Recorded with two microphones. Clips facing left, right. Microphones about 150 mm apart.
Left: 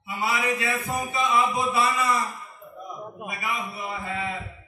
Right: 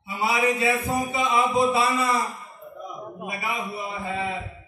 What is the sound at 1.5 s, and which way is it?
Speech, 30° right (ahead or behind).